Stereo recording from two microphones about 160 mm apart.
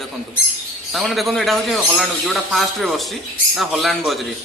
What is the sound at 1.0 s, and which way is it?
A man's voice, centre (ahead or behind).